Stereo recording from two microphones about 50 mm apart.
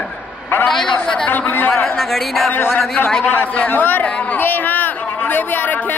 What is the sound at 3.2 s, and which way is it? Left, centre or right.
Speech, left.